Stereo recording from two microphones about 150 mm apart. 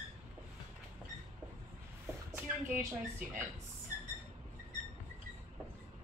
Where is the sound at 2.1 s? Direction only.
20° right (ahead or behind).